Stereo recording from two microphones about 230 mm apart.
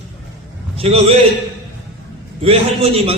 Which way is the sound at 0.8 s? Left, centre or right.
Right.